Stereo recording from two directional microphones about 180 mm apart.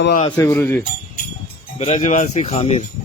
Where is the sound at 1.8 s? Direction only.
40° left (ahead or behind).